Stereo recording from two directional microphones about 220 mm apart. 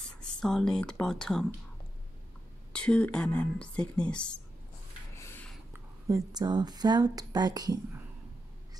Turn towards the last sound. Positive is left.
turn(degrees=-15)  # may be behind; listen again after turning